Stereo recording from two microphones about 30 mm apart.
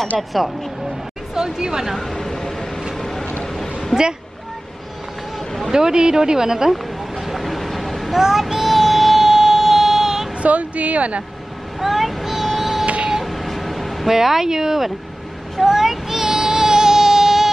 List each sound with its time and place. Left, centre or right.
0.1 s speech: centre
1.3 s speech: right
2.0 s a sound: centre
3.0 s vehicle: centre
3.9 s speech: centre
5.7 s speech: right
6.7 s a sound: centre
8.2 s child singing: centre
10.4 s speech: right
11.8 s child singing: centre
12.8 s printer: right
13.2 s vehicle: centre
14.0 s speech: centre
15.6 s child singing: centre